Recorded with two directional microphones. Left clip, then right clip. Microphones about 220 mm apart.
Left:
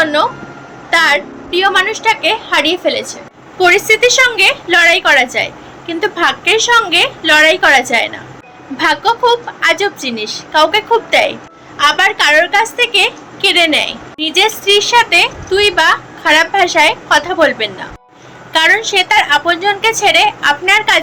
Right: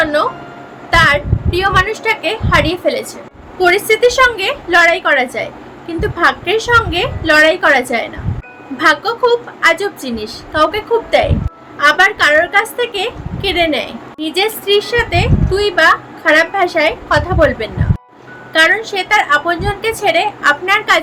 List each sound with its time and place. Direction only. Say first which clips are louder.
0.0 s music: left 2 dB; 15° right (ahead or behind)
0.9 s a woman's voice: even; 15° right (ahead or behind)